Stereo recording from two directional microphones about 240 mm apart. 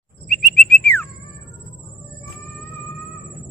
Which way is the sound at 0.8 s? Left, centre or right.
Centre.